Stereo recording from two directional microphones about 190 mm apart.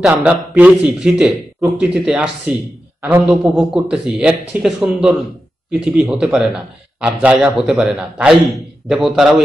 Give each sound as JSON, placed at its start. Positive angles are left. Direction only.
{"t": 0.0, "sound": "a man's voice", "side_deg": -5}